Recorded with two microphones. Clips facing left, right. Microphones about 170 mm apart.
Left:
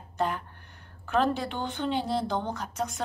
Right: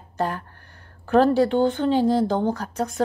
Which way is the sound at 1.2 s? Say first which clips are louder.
Right 10 dB; 35° right (ahead or behind).